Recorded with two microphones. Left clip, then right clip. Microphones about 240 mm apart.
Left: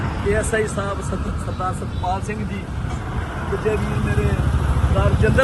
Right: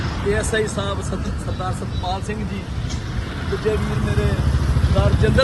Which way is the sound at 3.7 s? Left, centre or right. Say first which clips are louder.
Even; left.